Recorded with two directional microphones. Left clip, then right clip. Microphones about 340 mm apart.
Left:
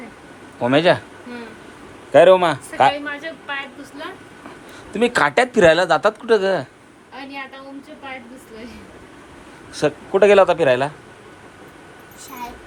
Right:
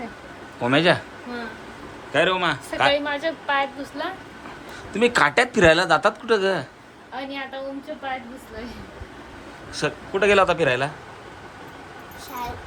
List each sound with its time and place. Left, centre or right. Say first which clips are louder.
0.6 s speech: left 3 dB; centre
2.1 s a man's voice: left 9 dB; centre
2.9 s a woman's voice: right 4 dB; right
4.9 s speech: left 2 dB; centre
9.7 s speech: left 7 dB; centre